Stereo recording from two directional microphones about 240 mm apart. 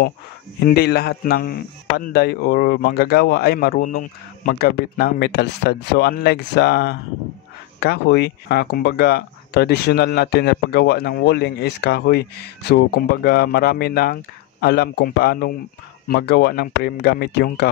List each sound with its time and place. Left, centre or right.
0.7 s speech: left